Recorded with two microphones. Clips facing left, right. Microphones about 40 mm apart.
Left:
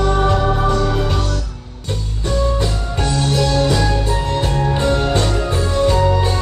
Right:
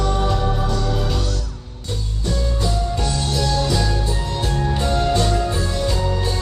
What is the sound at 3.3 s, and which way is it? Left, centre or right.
Music, left.